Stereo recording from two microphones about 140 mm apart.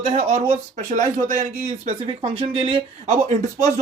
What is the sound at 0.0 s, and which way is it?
Speech, 55° right (ahead or behind).